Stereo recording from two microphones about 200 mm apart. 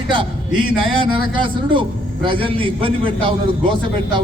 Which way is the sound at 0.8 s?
25° right (ahead or behind).